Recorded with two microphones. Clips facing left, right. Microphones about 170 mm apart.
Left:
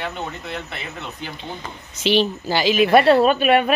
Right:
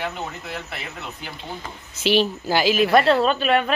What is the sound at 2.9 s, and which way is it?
Speech, 15° left (ahead or behind).